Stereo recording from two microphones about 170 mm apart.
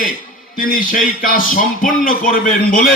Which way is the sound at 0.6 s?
55° left (ahead or behind).